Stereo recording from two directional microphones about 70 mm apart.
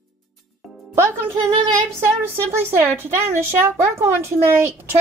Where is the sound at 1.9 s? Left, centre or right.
Right.